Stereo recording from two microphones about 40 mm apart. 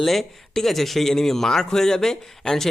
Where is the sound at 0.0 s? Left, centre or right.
Centre.